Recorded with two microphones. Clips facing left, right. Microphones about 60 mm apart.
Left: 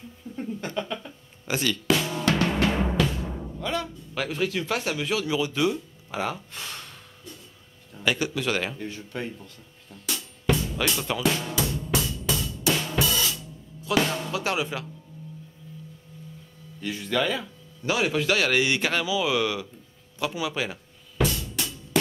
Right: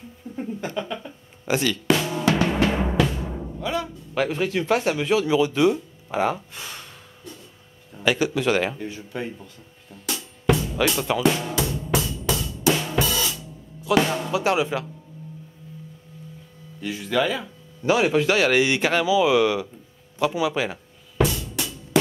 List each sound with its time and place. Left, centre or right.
0.4 s speech: centre
1.6 s drum: centre
4.1 s speech: centre
6.5 s gasp: centre
7.9 s speech: centre
12.3 s music: centre
12.6 s drum kit: centre
13.8 s speech: centre
16.8 s speech: centre
17.9 s speech: centre
20.2 s drum: centre